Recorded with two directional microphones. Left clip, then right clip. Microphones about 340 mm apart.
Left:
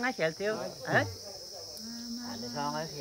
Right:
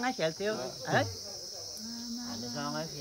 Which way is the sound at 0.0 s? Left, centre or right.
Centre.